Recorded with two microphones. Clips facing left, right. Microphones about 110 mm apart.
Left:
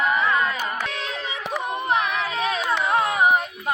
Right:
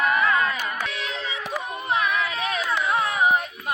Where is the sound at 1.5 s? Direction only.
25° left (ahead or behind).